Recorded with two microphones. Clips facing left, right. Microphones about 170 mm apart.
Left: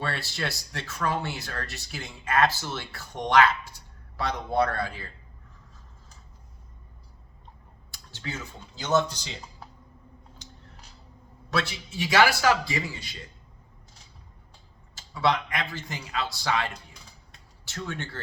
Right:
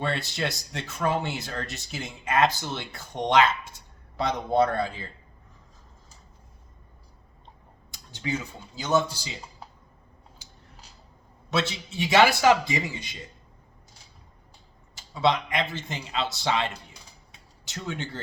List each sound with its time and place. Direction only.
0.0 s speech: 20° right (ahead or behind)
7.9 s a sound: 20° right (ahead or behind)
8.8 s a man's voice: 10° right (ahead or behind)
11.5 s speech: 20° right (ahead or behind)
14.9 s a man's voice: 20° right (ahead or behind)